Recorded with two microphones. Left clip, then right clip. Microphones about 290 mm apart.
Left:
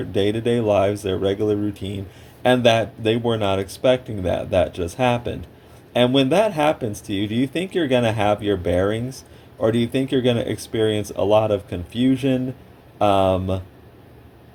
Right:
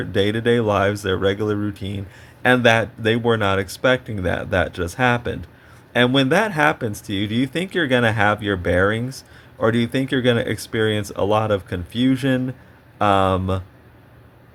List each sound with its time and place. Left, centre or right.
0.2 s speech: right